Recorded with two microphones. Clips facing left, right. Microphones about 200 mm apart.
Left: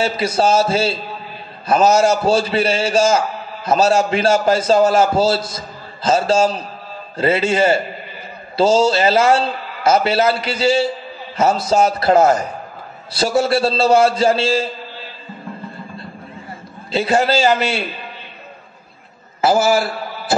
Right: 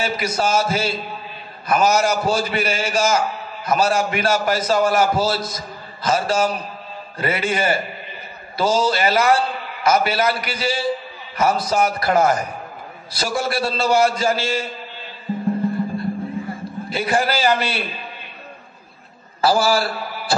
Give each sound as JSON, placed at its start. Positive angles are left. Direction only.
{"t": 0.0, "sound": "a man's voice", "side_deg": 30}
{"t": 16.9, "sound": "a man's voice", "side_deg": 25}
{"t": 19.4, "sound": "a man's voice", "side_deg": 20}